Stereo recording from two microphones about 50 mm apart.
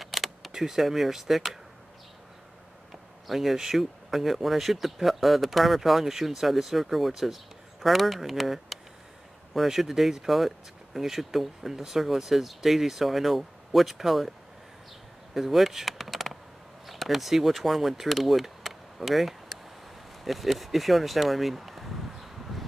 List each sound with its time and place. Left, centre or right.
0.0 s vehicle: centre
0.5 s speech: centre
3.3 s speech: centre
15.3 s a sound: centre
16.8 s speech: centre
20.2 s a sound: centre